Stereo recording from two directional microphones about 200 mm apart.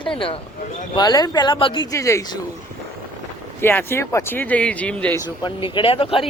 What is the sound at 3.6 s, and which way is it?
Speech, 10° left (ahead or behind).